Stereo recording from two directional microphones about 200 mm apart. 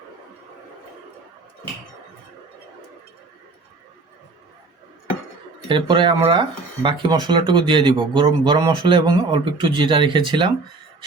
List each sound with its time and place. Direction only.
5.6 s speech: 25° right (ahead or behind)